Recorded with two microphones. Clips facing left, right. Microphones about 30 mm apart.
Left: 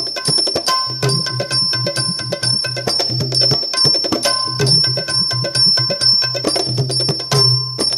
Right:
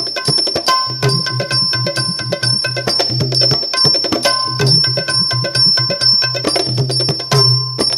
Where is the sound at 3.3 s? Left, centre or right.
Right.